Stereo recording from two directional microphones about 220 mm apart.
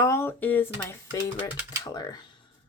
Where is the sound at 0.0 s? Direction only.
10° left (ahead or behind).